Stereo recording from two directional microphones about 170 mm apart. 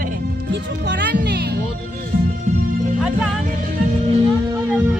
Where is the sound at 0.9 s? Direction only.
80° right.